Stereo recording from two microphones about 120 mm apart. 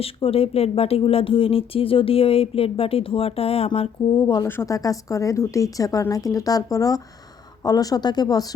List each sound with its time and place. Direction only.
0.0 s speech: 55° left (ahead or behind)
4.2 s speech: 40° left (ahead or behind)
4.4 s speech: 25° left (ahead or behind)